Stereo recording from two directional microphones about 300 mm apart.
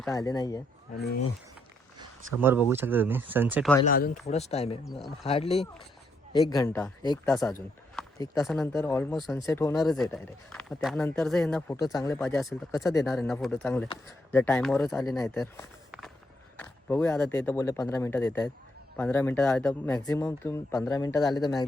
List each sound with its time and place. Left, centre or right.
0.1 s speech: centre
0.9 s speech: left
2.0 s speech: centre
3.8 s speech: left; by 7.4 s centre
7.4 s speech: centre
9.5 s speech: centre
12.2 s speech: centre
12.7 s speech: centre
13.1 s speech: centre